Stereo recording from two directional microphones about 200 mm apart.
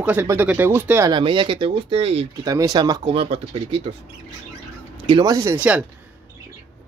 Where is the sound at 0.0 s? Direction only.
10° right (ahead or behind).